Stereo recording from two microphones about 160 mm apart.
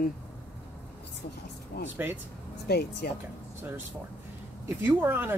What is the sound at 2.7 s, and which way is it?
Speech, 85° left.